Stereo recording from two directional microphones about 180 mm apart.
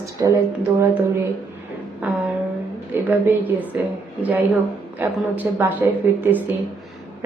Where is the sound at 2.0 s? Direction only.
5° right (ahead or behind).